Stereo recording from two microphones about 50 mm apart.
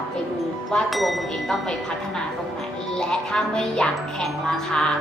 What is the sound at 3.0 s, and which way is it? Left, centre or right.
A woman's voice, centre.